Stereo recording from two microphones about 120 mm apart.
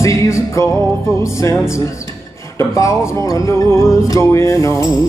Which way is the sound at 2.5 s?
25° left (ahead or behind).